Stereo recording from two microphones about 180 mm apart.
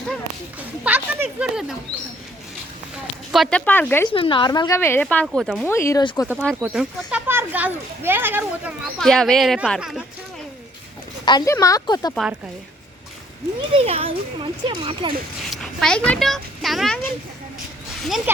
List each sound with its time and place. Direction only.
0.9 s a child's voice: 10° right (ahead or behind)
3.3 s a woman's voice: 5° left (ahead or behind)
4.1 s a woman's voice: 30° left (ahead or behind); by 5.6 s centre (ahead or behind)
5.6 s a woman's voice: 15° left (ahead or behind)
6.3 s a child's voice: 5° left (ahead or behind)
7.1 s a child's voice: 10° right (ahead or behind)
9.0 s a child's voice: centre (ahead or behind)
11.3 s a woman's voice: 20° left (ahead or behind)
13.6 s a child's voice: 35° right (ahead or behind)
15.4 s a child's voice: centre (ahead or behind)